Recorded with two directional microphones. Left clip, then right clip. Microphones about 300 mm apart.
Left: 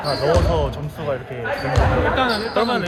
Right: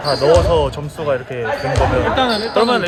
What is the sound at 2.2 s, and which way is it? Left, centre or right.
Speech, right.